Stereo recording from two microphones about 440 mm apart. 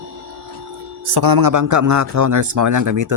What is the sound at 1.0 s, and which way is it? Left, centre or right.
A man's voice, right.